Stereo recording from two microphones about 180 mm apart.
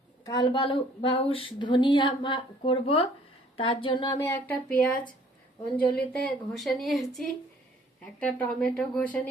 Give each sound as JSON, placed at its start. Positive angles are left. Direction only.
{"t": 0.3, "sound": "a woman's voice", "side_deg": 25}
{"t": 6.1, "sound": "a woman's voice", "side_deg": 0}